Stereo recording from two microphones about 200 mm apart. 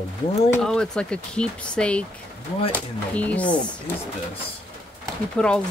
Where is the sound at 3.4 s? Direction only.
20° left (ahead or behind).